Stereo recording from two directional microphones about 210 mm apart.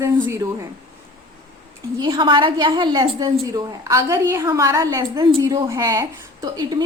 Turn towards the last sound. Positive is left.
turn(degrees=-20)  # may be behind; listen again after turning